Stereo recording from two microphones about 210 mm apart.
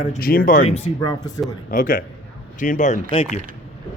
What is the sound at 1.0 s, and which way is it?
Speech, 15° left (ahead or behind).